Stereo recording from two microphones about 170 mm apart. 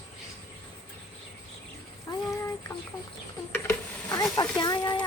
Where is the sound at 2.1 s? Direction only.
25° left (ahead or behind).